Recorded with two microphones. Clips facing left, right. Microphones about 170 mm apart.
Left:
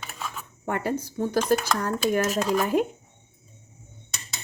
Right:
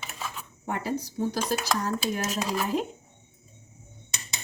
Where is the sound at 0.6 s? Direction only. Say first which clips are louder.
Left 3 dB; 55° left (ahead or behind).